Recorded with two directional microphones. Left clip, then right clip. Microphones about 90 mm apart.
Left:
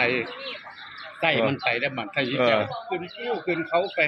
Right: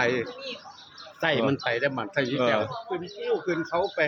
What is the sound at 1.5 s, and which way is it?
Speech, 40° right (ahead or behind).